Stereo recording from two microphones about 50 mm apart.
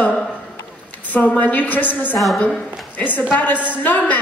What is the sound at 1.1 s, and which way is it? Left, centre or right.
A woman's voice, left.